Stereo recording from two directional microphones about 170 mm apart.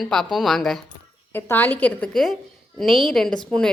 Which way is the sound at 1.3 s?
10° left (ahead or behind).